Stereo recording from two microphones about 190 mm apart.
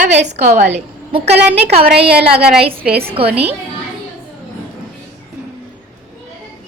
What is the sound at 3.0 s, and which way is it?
Speech, 30° right (ahead or behind).